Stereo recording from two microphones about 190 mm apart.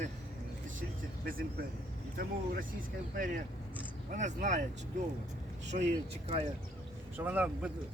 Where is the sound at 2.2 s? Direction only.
50° right (ahead or behind).